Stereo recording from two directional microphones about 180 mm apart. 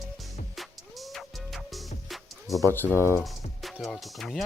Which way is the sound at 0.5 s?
Centre (ahead or behind).